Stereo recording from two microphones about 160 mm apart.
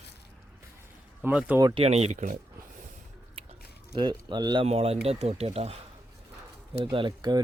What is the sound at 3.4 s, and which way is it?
Chewing, 35° right (ahead or behind).